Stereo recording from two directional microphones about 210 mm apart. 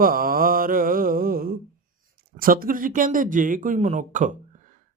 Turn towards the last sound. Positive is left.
turn(degrees=-35)  # may be behind; listen again after turning